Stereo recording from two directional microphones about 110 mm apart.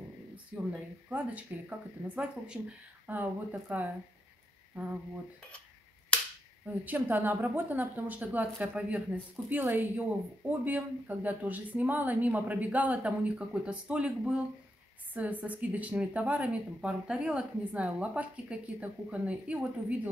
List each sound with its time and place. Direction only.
0.7 s speech: 15° right (ahead or behind)
6.6 s speech: 15° right (ahead or behind)